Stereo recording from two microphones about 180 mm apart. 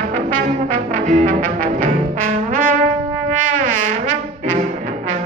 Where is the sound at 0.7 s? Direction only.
45° right (ahead or behind).